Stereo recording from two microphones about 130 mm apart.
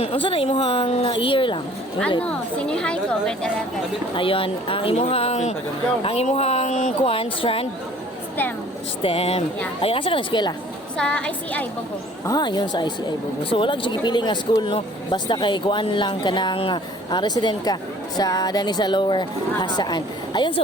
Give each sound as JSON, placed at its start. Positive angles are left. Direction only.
{"t": 0.0, "sound": "a woman's voice", "side_deg": 45}
{"t": 2.2, "sound": "a woman's voice", "side_deg": 5}
{"t": 4.1, "sound": "a woman's voice", "side_deg": 45}
{"t": 6.0, "sound": "a woman's voice", "side_deg": 45}
{"t": 9.0, "sound": "a woman's voice", "side_deg": 50}
{"t": 10.9, "sound": "a woman's voice", "side_deg": 5}
{"t": 12.2, "sound": "speech", "side_deg": 30}